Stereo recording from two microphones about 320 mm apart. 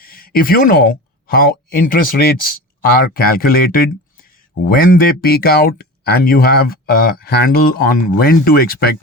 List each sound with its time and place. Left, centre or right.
0.0 s speech: left